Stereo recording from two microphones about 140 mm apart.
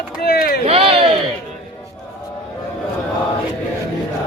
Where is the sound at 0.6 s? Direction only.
45° right (ahead or behind).